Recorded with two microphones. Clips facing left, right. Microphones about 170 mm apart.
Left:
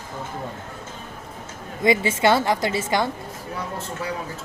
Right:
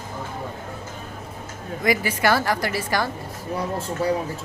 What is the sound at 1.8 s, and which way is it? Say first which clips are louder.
A woman's voice: left 3 dB; 25° left (ahead or behind).